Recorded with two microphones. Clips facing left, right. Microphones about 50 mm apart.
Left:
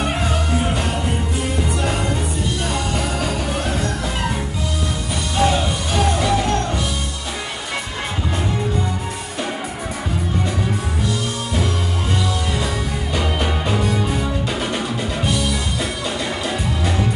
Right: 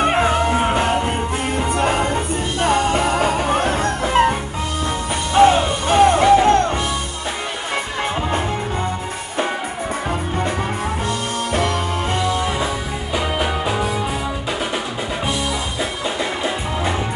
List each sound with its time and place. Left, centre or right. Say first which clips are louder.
0.0 s music: right 6 dB; right
11.1 s music: right 2 dB; right
13.1 s music: right 2 dB; centre